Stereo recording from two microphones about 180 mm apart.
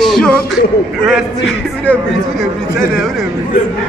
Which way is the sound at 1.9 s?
10° left (ahead or behind).